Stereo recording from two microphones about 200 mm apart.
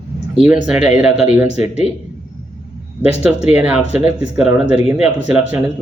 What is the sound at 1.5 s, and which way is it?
Speech, 35° left (ahead or behind).